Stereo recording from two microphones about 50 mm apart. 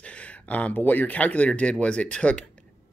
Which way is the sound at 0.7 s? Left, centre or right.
Left.